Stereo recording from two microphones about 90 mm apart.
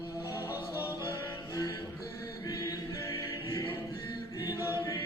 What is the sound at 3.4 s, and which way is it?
Choir, 70° left (ahead or behind).